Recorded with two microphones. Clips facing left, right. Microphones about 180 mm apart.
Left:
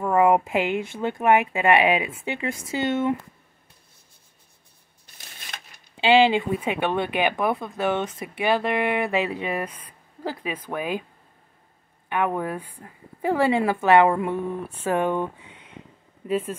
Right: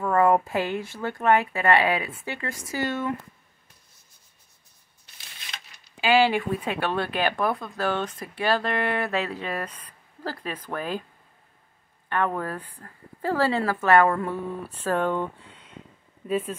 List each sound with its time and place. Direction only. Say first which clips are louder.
0.0 s speech: left 2 dB; 15° left (ahead or behind)
5.1 s a sound: left 2 dB; 50° left (ahead or behind)
5.9 s speech: left 3 dB; 20° left (ahead or behind)
12.1 s speech: left 2 dB; 15° left (ahead or behind)